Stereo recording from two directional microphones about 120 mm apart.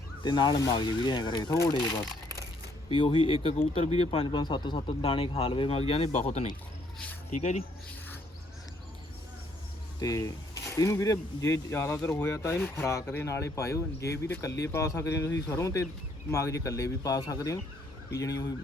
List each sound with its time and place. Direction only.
0.2 s speech: 40° left (ahead or behind)
1.7 s speech: 40° left (ahead or behind); by 6.5 s 55° left (ahead or behind)
7.3 s speech: 80° left
10.0 s speech: 30° left (ahead or behind)